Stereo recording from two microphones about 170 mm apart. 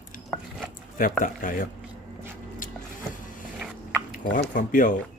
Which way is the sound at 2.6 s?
50° left (ahead or behind).